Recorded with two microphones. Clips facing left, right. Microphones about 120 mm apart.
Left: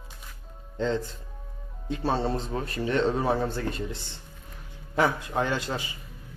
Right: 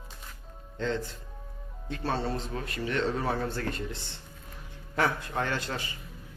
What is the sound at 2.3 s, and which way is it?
Speech, 35° left (ahead or behind).